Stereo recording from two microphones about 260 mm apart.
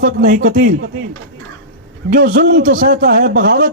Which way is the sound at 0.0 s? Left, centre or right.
Right.